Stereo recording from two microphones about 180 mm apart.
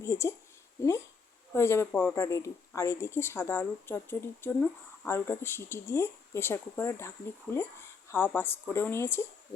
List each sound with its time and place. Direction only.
0.0 s speech: 15° left (ahead or behind)